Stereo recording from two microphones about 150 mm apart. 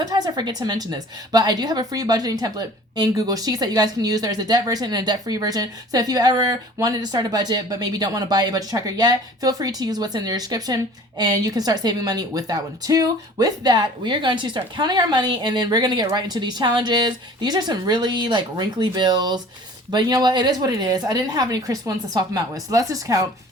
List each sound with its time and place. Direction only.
0.0 s a woman's voice: 25° right (ahead or behind)